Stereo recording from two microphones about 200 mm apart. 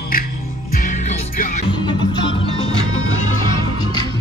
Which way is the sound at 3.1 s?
90° left.